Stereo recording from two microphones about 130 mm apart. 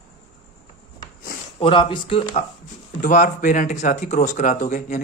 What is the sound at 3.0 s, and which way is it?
Speech, 85° left.